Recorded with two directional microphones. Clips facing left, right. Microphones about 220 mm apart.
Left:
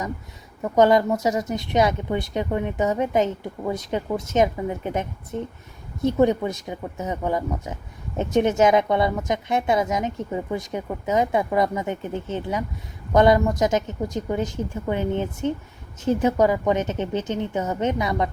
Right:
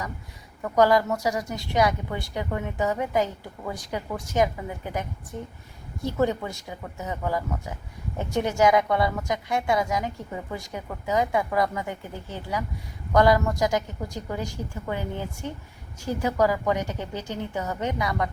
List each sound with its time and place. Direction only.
0.6 s speech: 20° left (ahead or behind)